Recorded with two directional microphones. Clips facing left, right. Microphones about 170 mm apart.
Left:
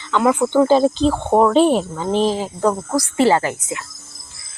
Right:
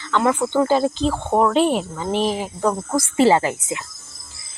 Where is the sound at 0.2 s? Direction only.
5° left (ahead or behind).